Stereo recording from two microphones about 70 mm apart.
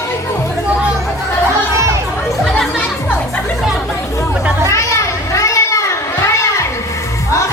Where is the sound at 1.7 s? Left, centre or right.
Right.